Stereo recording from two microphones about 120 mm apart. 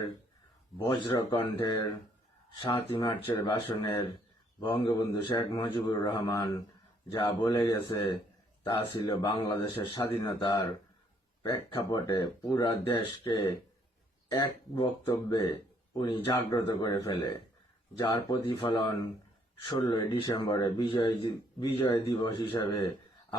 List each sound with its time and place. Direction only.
0.9 s speech: 40° left (ahead or behind)
1.6 s speech: 30° left (ahead or behind)
3.1 s speech: 20° left (ahead or behind)
3.4 s speech: 40° left (ahead or behind)
7.1 s a man's voice: 45° left (ahead or behind)
7.4 s speech: 30° left (ahead or behind)
8.6 s a man's voice: 45° left (ahead or behind)
11.4 s speech: 30° left (ahead or behind)
13.0 s a man's voice: 45° left (ahead or behind)
20.2 s speech: 30° left (ahead or behind)